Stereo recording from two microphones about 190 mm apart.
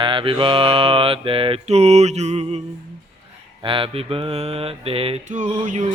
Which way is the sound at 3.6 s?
25° right (ahead or behind).